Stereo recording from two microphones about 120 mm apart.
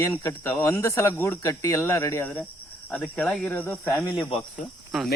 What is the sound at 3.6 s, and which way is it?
Speech, 25° left (ahead or behind).